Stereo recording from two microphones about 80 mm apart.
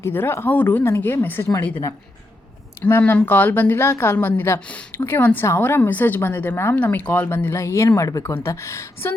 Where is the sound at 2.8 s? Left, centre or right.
Left.